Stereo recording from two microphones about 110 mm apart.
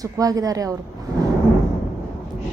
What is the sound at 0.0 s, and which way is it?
Speech, 35° right (ahead or behind).